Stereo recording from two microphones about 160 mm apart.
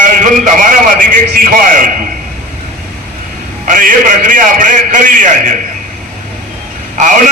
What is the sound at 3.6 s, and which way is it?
A man's voice, 55° right (ahead or behind).